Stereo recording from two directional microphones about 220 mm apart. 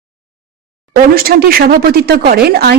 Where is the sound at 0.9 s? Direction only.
40° right (ahead or behind).